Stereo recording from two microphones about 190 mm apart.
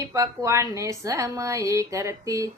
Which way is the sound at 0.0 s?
15° right (ahead or behind).